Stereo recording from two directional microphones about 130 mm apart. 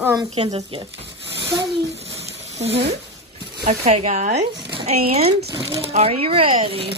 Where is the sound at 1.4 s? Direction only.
35° right (ahead or behind).